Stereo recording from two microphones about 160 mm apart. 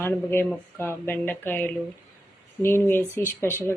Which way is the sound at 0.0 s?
15° left (ahead or behind).